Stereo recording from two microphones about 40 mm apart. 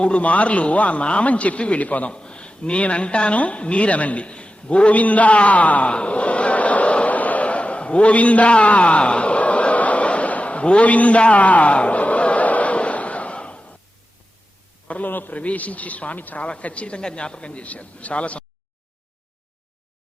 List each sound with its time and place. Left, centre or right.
0.0 s a woman's voice: left
2.1 s a woman's voice: left
5.9 s a sound: left
14.8 s a man's voice: left
15.1 s a man's voice: left
15.4 s a woman's voice: left